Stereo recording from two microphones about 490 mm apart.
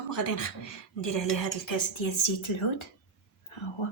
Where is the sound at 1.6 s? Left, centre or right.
Left.